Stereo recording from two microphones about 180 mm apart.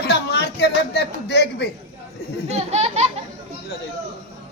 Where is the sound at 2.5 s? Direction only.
35° right (ahead or behind).